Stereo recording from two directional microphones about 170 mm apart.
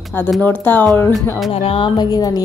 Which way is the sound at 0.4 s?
10° left (ahead or behind).